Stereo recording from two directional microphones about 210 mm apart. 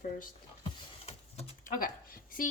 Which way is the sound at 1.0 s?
30° left (ahead or behind).